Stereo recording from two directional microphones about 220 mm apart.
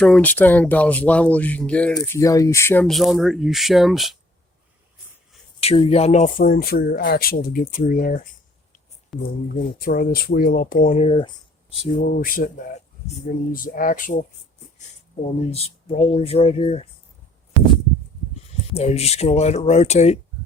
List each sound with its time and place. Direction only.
0.0 s speech: 5° left (ahead or behind)
5.5 s speech: 25° left (ahead or behind)
9.1 s speech: centre (ahead or behind)
9.8 s speech: 40° left (ahead or behind)
11.9 s speech: 40° left (ahead or behind)
13.5 s speech: 40° left (ahead or behind)
15.4 s speech: 30° left (ahead or behind)
18.7 s speech: 30° left (ahead or behind)